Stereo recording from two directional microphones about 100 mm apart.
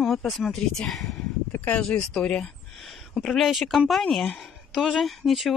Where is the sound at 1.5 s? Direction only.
15° left (ahead or behind).